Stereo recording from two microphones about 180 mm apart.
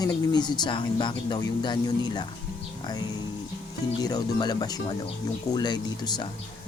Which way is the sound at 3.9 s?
20° left (ahead or behind).